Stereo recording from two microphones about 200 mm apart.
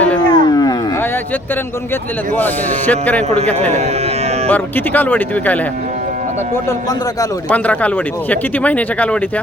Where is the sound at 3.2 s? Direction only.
35° right (ahead or behind).